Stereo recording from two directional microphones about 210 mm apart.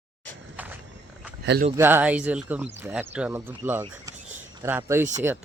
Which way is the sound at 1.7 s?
10° right (ahead or behind).